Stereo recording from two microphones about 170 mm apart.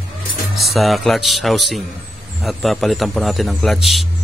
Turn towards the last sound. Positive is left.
turn(degrees=0)  # may be behind; listen again after turning